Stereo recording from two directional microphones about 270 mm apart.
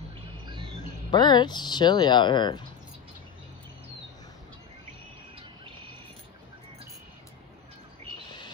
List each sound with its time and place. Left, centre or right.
1.1 s speech: centre